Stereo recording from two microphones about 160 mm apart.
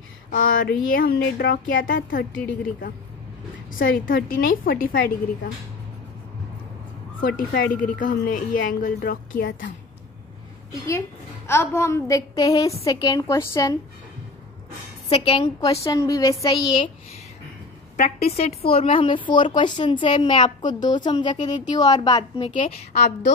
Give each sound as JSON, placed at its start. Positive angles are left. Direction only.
{"t": 0.3, "sound": "speech", "side_deg": 65}
{"t": 2.3, "sound": "a woman's voice", "side_deg": 10}
{"t": 3.7, "sound": "speech", "side_deg": 65}
{"t": 7.2, "sound": "speech", "side_deg": 60}
{"t": 10.7, "sound": "a woman's voice", "side_deg": 20}
{"t": 15.0, "sound": "speech", "side_deg": 35}
{"t": 15.8, "sound": "a woman's voice", "side_deg": 20}
{"t": 17.9, "sound": "a woman's voice", "side_deg": 40}
{"t": 22.6, "sound": "a woman's voice", "side_deg": 45}